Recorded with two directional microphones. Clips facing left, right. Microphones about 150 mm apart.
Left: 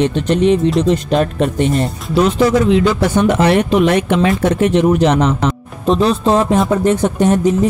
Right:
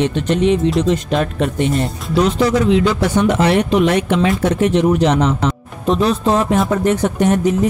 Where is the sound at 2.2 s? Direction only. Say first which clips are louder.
Left 2 dB; 50° left (ahead or behind).